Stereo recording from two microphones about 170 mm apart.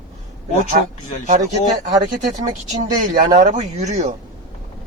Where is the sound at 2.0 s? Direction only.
50° right (ahead or behind).